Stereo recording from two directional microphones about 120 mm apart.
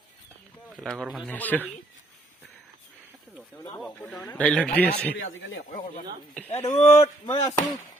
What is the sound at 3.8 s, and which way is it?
A man's voice, centre (ahead or behind).